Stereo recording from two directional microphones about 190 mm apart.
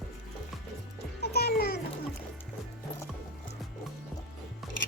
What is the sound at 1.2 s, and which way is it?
Music, 55° left (ahead or behind).